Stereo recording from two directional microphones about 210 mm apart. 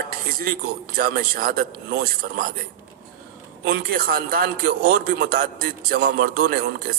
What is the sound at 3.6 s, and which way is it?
A man's voice, 45° right (ahead or behind).